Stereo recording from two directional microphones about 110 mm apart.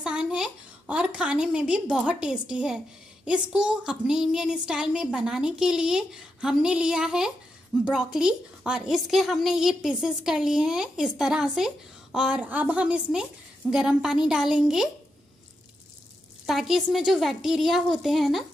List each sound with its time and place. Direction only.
0.0 s a woman's voice: 10° right (ahead or behind)
16.4 s a woman's voice: centre (ahead or behind)